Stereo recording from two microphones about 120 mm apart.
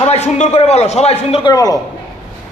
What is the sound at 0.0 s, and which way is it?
A man's voice, 70° left (ahead or behind).